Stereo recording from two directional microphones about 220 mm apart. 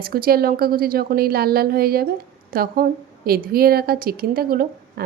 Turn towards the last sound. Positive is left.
turn(degrees=-40)  # may be behind; listen again after turning